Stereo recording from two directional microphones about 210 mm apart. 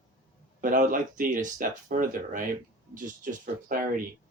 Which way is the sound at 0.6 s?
40° right (ahead or behind).